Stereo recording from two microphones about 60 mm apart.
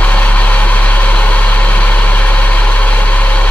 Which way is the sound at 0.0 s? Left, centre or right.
Left.